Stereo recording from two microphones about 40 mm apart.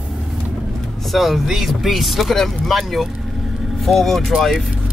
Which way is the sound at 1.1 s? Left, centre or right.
Centre.